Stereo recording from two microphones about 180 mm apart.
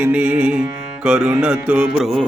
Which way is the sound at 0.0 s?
5° right (ahead or behind).